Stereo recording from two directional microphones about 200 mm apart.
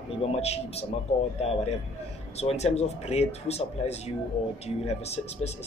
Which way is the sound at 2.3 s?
30° left (ahead or behind).